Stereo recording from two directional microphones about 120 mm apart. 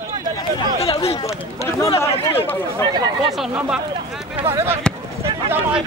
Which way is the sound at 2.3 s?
20° left (ahead or behind).